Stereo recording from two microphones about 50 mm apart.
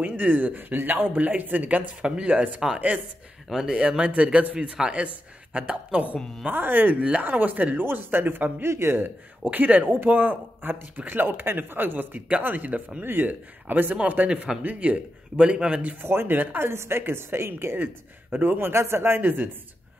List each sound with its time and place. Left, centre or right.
0.0 s speech: right
2.0 s speech: centre
3.4 s speech: centre
6.4 s speech: right
7.0 s speech: right
7.2 s speech: right
8.6 s a man's voice: right
9.4 s a woman's voice: right
14.3 s speech: centre
16.0 s a woman's voice: right
18.3 s speech: right
18.7 s a man's voice: right
19.2 s speech: right